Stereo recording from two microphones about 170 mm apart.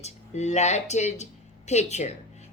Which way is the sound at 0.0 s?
40° left (ahead or behind).